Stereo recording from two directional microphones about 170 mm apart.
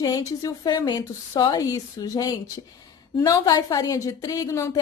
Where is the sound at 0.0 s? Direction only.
20° left (ahead or behind).